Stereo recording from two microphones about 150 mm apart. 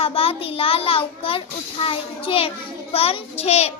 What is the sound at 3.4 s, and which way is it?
Child singing, 45° left (ahead or behind).